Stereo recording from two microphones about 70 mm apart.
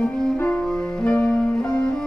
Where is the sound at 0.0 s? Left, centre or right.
Centre.